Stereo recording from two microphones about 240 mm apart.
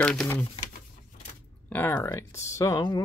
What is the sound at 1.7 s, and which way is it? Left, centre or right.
Speech, centre.